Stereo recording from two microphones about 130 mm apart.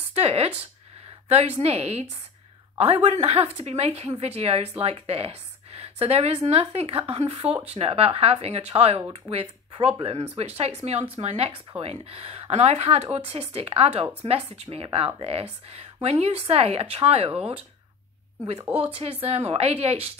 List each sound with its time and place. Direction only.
0.1 s a woman's voice: 50° right (ahead or behind)
18.8 s a woman's voice: 50° right (ahead or behind)